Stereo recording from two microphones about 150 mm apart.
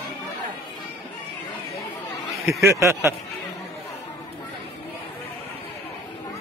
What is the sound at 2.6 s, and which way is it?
Speech, 20° right (ahead or behind).